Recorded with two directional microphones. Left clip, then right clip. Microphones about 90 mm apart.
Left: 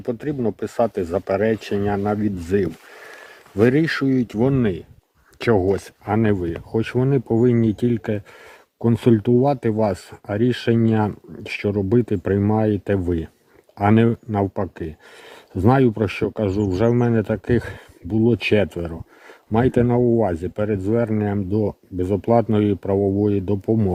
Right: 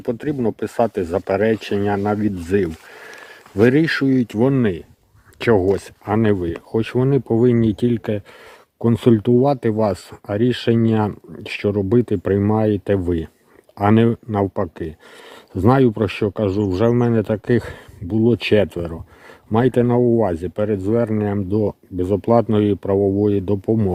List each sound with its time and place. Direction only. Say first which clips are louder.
0.0 s speech: right 2 dB; 35° right (ahead or behind); by 20.7 s 10° right (ahead or behind)
20.7 s speech: right 2 dB; 20° right (ahead or behind)
23.6 s speech: even; centre (ahead or behind)